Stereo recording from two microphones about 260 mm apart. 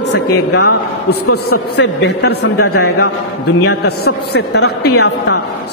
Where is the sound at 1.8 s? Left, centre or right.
Left.